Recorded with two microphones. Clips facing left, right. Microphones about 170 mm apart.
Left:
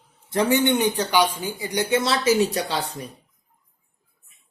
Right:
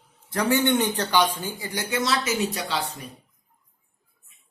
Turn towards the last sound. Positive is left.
turn(degrees=35)  # may be behind; listen again after turning